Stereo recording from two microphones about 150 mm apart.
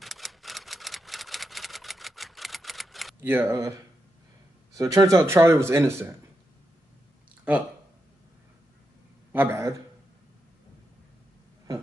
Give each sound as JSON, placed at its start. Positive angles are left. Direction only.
{"t": 0.0, "sound": "typewriter", "side_deg": 0}
{"t": 3.2, "sound": "speech", "side_deg": -15}
{"t": 7.5, "sound": "speech", "side_deg": -10}
{"t": 9.3, "sound": "speech", "side_deg": -15}